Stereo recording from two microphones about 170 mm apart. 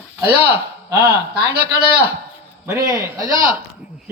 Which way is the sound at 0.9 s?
15° right (ahead or behind).